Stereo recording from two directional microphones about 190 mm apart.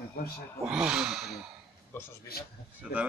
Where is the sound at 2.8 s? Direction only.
5° right (ahead or behind).